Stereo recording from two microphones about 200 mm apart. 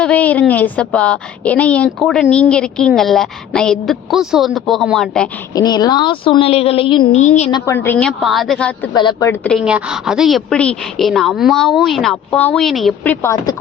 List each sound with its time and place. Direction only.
0.0 s a woman's voice: 5° left (ahead or behind)
5.5 s a woman's voice: 20° left (ahead or behind); by 7.5 s 35° left (ahead or behind)
7.5 s a woman's voice: 15° left (ahead or behind)
8.9 s a woman's voice: 20° left (ahead or behind)
9.4 s a woman's voice: centre (ahead or behind)
13.2 s a woman's voice: 20° left (ahead or behind)